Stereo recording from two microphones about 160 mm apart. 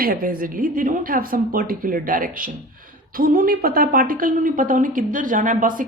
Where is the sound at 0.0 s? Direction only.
65° right (ahead or behind).